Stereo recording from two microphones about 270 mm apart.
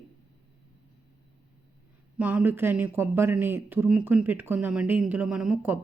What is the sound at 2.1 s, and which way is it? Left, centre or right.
A woman's voice, centre.